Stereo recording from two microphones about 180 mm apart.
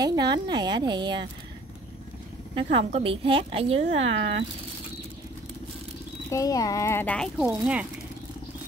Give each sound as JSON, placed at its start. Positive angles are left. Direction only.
{"t": 0.0, "sound": "speech", "side_deg": -20}
{"t": 2.5, "sound": "a woman's voice", "side_deg": -35}
{"t": 6.3, "sound": "speech", "side_deg": 20}